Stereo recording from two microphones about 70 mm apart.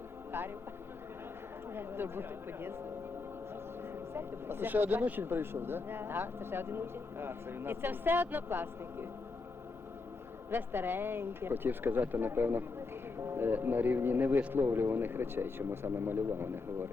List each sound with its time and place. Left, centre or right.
0.3 s vehicle: right
1.7 s speech: right
4.1 s speech: right
10.5 s speech: right